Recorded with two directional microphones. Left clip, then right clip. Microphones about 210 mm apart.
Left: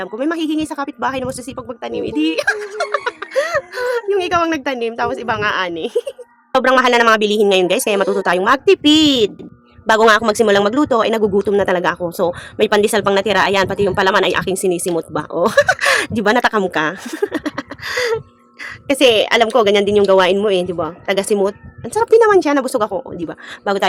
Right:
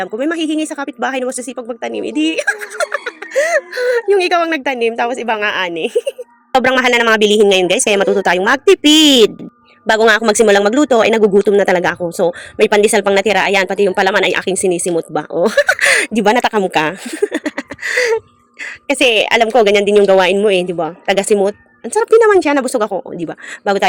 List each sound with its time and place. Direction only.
0.0 s speech: 5° right (ahead or behind)
2.7 s music: 25° right (ahead or behind)
3.3 s a woman's voice: 10° right (ahead or behind)
9.8 s speech: 5° right (ahead or behind)